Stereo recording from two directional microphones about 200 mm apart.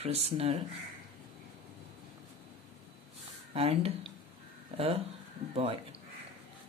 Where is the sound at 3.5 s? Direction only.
30° right (ahead or behind).